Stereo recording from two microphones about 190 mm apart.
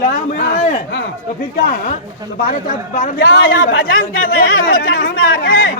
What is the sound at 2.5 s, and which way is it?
Speech, 40° left (ahead or behind).